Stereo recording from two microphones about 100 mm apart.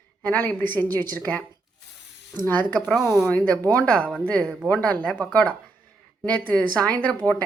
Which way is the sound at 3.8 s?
10° left (ahead or behind).